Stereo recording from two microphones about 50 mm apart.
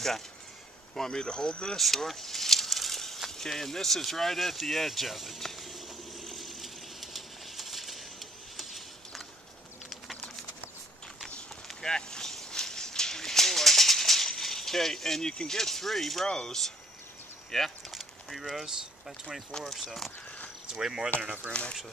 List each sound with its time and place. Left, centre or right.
0.9 s speech: centre
1.8 s a sound: centre
11.6 s a sound: centre
15.3 s speech: centre
17.9 s a sound: centre
19.5 s speech: centre
20.7 s speech: centre
21.2 s speech: right
21.5 s speech: left